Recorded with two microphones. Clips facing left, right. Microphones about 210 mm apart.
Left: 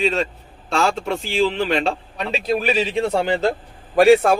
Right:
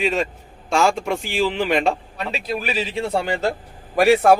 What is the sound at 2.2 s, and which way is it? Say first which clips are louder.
Speech: left 6 dB; 25° left (ahead or behind).